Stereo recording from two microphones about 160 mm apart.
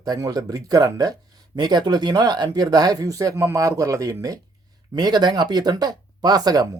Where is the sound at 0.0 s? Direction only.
25° right (ahead or behind).